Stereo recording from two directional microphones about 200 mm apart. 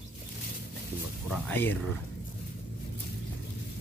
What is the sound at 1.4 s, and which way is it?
Speech, 10° left (ahead or behind).